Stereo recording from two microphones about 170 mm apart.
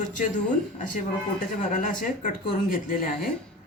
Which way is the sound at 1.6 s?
50° left (ahead or behind).